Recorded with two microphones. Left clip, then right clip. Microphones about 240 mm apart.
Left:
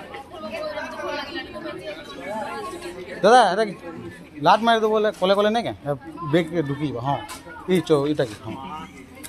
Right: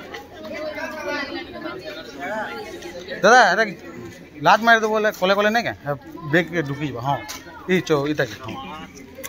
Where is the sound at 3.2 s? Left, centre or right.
Centre.